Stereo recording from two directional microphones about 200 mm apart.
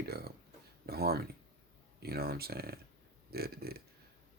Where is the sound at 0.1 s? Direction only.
50° right (ahead or behind).